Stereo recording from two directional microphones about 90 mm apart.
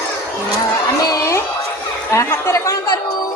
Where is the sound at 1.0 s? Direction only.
45° left (ahead or behind).